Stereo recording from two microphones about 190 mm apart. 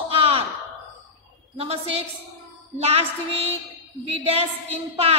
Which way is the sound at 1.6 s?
30° right (ahead or behind).